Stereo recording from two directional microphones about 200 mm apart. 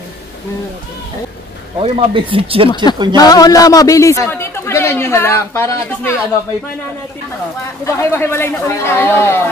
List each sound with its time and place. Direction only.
1.8 s speech: 25° right (ahead or behind)
2.7 s a man's voice: 20° left (ahead or behind)
7.8 s a man's voice: 10° left (ahead or behind)